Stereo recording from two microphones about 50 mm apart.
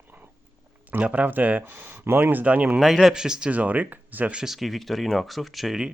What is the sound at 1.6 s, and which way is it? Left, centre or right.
Speech, right.